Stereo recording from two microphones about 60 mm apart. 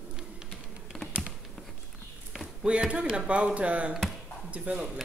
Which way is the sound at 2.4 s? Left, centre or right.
Centre.